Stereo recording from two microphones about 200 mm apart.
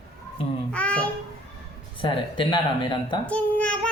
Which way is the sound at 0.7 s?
5° left (ahead or behind).